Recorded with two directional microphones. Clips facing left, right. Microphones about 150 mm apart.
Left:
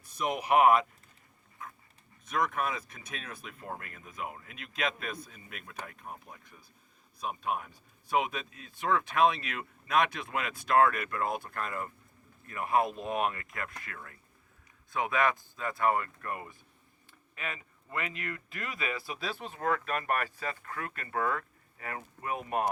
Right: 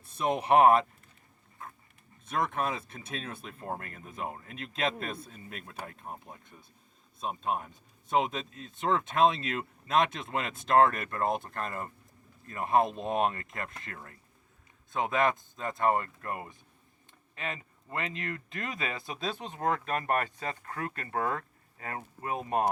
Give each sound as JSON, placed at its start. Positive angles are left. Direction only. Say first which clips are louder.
{"t": 0.0, "sound": "speech", "louder": "right 3 dB", "side_deg": -25}
{"t": 2.2, "sound": "speech", "louder": "even", "side_deg": -30}
{"t": 20.6, "sound": "speech", "louder": "right 3 dB", "side_deg": -35}